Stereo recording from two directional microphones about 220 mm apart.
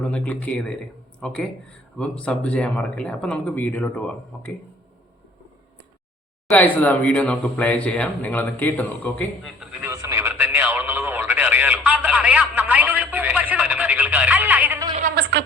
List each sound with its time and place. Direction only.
0.0 s speech: 5° left (ahead or behind)
6.5 s speech: 5° left (ahead or behind)
9.8 s radio: 15° right (ahead or behind)
15.1 s a sound: 50° right (ahead or behind)